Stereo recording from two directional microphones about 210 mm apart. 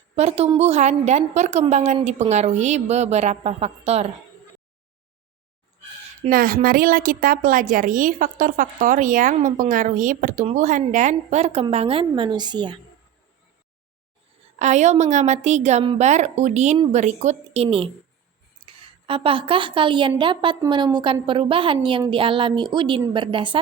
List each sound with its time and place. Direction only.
0.2 s a woman's voice: 30° right (ahead or behind)
6.2 s a woman's voice: 40° right (ahead or behind); by 12.8 s 20° right (ahead or behind)
14.6 s a woman's voice: 35° right (ahead or behind)